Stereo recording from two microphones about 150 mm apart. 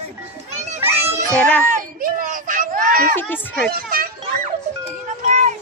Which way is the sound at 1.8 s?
70° right (ahead or behind).